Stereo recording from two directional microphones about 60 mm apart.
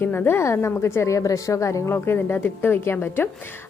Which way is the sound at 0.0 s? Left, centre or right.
Left.